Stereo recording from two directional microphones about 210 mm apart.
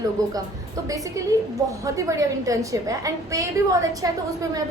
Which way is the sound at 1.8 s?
15° right (ahead or behind).